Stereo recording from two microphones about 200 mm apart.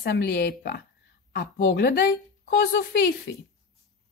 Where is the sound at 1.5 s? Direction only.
65° left (ahead or behind).